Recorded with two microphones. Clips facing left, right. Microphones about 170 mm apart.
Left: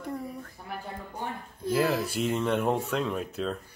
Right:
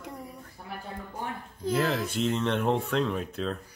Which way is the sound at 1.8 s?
5° left (ahead or behind).